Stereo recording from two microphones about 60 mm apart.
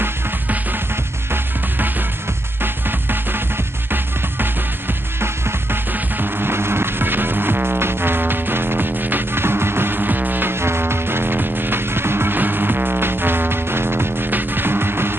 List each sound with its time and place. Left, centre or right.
1.3 s music: right